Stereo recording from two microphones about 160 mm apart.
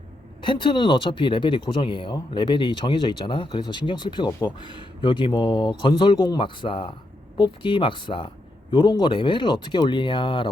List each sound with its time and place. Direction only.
0.4 s speech: 30° left (ahead or behind)